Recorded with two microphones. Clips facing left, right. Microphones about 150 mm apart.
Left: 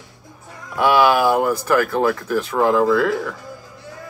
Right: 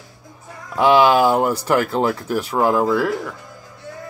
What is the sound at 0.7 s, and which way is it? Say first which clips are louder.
Speech: right 2 dB; 20° right (ahead or behind).